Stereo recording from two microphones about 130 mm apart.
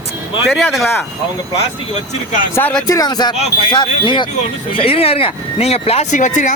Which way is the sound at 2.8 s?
30° left (ahead or behind).